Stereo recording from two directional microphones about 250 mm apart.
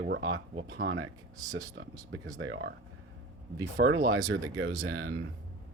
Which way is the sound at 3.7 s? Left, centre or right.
Right.